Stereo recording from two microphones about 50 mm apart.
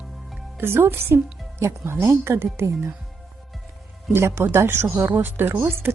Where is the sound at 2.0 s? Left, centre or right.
Right.